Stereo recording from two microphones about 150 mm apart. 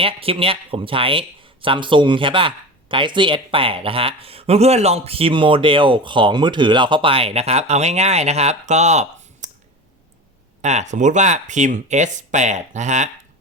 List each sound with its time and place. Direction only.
0.0 s speech: 40° right (ahead or behind)
10.6 s speech: 50° right (ahead or behind)